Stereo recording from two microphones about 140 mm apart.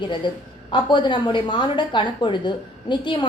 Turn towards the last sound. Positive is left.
turn(degrees=35)  # may be behind; listen again after turning